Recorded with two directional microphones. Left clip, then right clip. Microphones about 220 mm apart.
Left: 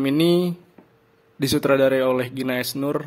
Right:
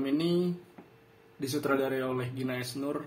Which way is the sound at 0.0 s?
50° left (ahead or behind).